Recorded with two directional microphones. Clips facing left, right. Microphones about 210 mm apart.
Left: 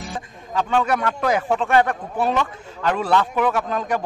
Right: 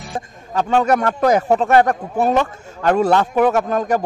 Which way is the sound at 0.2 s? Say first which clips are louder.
Right 4 dB; 45° right (ahead or behind).